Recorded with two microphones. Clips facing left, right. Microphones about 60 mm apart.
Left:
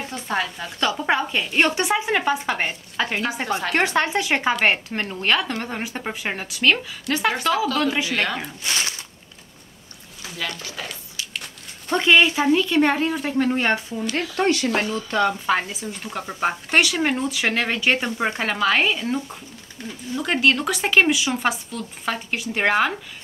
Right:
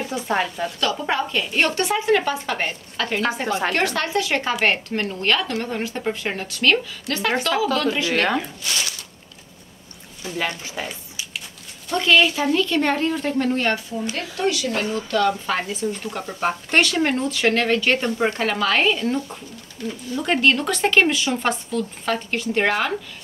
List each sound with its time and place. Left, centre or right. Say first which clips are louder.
0.1 s speech: right 2 dB; centre
0.7 s speech: left 3 dB; centre
8.1 s speech: right 3 dB; right
8.6 s speech: left 1 dB; left
10.3 s speech: right 4 dB; right
11.9 s speech: left 1 dB; centre
14.3 s speech: left 2 dB; left
15.0 s speech: right 2 dB; centre
15.4 s speech: left 1 dB; centre
19.8 s speech: right 6 dB; left
20.2 s speech: right 1 dB; centre